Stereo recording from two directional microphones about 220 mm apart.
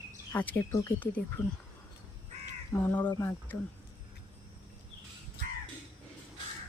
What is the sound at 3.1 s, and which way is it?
Speech, 10° left (ahead or behind).